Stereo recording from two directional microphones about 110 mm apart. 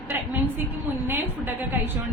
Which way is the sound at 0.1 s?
20° right (ahead or behind).